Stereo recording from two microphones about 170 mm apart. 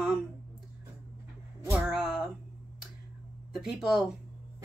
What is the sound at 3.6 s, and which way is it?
Speech, centre (ahead or behind).